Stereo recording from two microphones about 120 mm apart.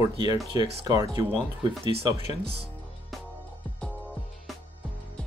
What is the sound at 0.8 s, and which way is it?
Speech, 30° right (ahead or behind).